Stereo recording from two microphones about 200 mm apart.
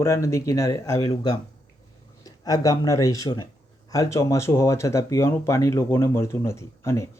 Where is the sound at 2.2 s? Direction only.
20° left (ahead or behind).